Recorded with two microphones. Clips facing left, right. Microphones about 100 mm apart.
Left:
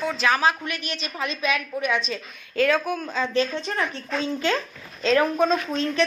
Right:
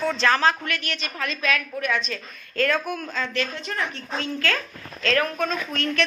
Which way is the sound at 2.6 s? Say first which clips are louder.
Left 2 dB; 5° left (ahead or behind).